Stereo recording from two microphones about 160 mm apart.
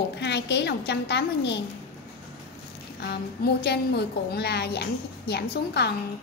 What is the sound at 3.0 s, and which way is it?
A woman's voice, 85° left.